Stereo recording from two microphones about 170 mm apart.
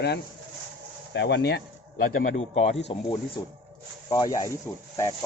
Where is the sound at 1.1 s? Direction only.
90° left; by 2.1 s 70° left (ahead or behind).